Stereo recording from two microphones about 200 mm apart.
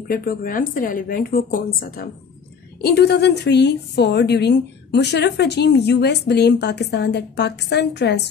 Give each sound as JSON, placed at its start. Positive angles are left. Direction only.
{"t": 0.1, "sound": "a woman's voice", "side_deg": 45}